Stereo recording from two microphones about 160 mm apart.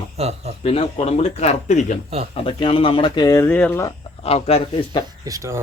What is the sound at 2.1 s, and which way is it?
Speech, 40° right (ahead or behind).